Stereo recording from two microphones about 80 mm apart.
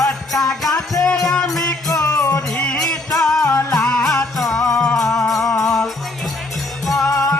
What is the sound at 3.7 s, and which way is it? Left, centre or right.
Music, centre.